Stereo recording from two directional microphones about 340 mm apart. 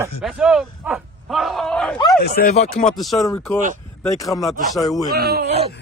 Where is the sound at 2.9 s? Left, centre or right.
Centre.